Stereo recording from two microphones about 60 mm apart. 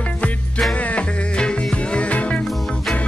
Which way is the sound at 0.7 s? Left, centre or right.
Left.